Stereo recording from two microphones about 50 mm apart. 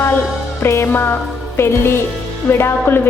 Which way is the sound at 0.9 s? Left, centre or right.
Left.